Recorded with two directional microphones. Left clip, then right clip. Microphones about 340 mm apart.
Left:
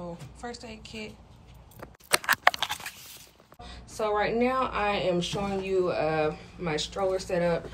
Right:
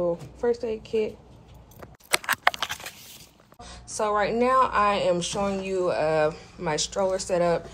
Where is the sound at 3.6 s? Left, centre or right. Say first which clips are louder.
Right 3 dB; centre.